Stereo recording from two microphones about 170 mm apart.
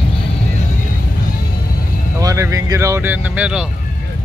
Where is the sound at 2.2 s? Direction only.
20° right (ahead or behind).